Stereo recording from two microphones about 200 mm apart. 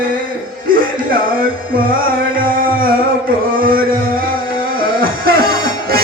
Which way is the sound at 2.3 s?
45° right (ahead or behind).